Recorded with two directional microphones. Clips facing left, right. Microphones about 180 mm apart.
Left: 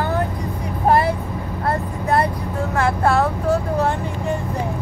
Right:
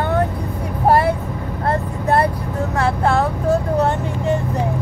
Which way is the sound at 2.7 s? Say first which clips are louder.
Even; 15° right (ahead or behind).